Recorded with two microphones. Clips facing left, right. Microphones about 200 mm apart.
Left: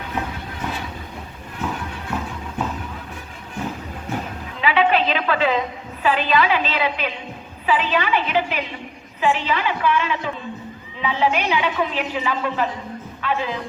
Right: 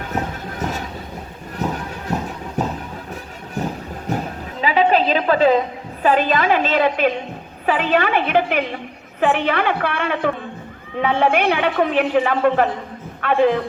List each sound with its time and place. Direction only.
0.1 s a sound: 40° right (ahead or behind)
1.5 s horse: 40° right (ahead or behind)
3.6 s train: 40° right (ahead or behind)
4.6 s a woman's voice: 40° right (ahead or behind); by 13.6 s 55° right (ahead or behind)